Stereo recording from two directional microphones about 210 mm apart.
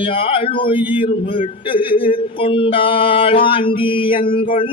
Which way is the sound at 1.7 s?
25° left (ahead or behind).